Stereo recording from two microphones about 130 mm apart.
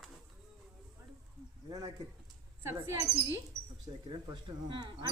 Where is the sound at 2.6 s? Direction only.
20° right (ahead or behind).